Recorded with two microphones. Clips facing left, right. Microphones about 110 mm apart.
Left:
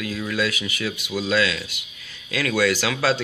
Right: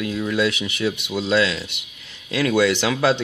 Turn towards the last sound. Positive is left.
turn(degrees=-20)  # may be behind; listen again after turning